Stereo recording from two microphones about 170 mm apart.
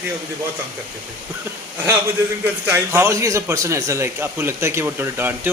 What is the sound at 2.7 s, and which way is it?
A man's voice, 15° right (ahead or behind).